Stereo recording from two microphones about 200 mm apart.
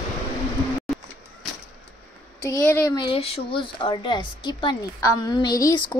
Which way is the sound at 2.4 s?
15° left (ahead or behind).